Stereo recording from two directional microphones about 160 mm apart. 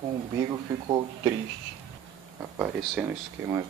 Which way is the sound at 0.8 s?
25° right (ahead or behind).